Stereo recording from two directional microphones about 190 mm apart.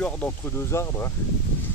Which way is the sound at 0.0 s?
5° left (ahead or behind).